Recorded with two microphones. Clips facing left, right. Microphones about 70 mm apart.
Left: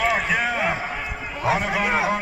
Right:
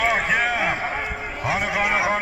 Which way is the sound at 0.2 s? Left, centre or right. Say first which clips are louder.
Right 1 dB; right.